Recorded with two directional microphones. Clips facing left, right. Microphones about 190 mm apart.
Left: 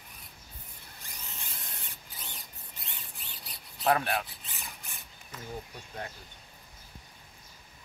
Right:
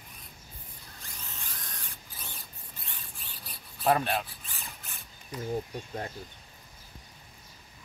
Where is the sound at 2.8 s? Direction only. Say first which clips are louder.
Left 1 dB; 20° left (ahead or behind).